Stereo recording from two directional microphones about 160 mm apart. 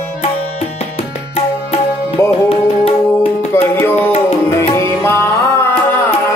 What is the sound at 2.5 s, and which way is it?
Music, 35° left (ahead or behind).